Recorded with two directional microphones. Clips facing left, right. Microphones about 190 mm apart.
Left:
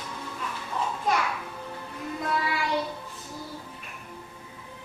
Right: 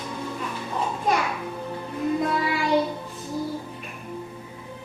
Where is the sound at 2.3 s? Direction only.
20° right (ahead or behind).